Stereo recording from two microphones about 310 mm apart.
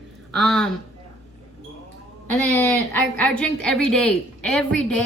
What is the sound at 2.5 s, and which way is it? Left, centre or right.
A woman's voice, centre.